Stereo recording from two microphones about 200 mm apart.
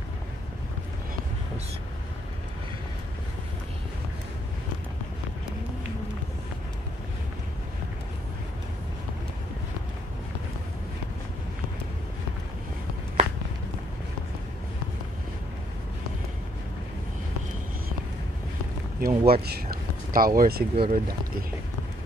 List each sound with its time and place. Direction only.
13.2 s walk: 35° right (ahead or behind)
18.9 s speech: 50° right (ahead or behind)